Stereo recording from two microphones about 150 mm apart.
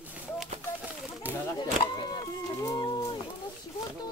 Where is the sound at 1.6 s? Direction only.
30° left (ahead or behind).